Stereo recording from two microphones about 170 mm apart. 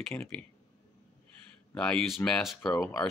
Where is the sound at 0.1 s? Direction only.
15° left (ahead or behind).